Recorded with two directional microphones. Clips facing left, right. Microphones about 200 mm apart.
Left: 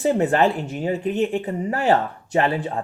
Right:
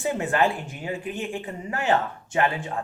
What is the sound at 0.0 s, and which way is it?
Speech, 40° left (ahead or behind).